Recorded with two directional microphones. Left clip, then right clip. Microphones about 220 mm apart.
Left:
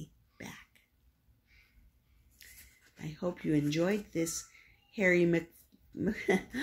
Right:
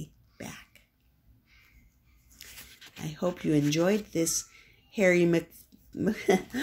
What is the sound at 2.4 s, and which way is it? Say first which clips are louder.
Dog: right 7 dB; 20° right (ahead or behind).